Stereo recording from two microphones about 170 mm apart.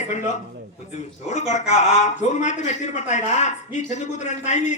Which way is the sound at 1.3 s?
45° left (ahead or behind).